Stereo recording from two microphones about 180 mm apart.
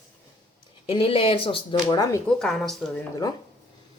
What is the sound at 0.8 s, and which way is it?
Speech, 30° left (ahead or behind).